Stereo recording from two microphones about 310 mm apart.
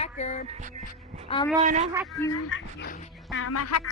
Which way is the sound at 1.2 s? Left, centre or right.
Centre.